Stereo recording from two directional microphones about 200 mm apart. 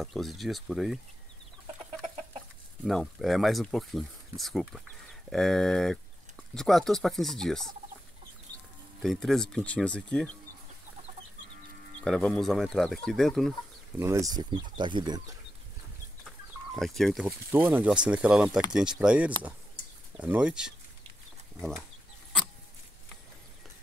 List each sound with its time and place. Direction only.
0.0 s speech: centre (ahead or behind)
2.8 s speech: centre (ahead or behind)
9.0 s speech: centre (ahead or behind)
12.0 s speech: 5° left (ahead or behind)
13.9 s speech: 15° right (ahead or behind)
16.3 s chicken: centre (ahead or behind)
17.5 s speech: 10° right (ahead or behind)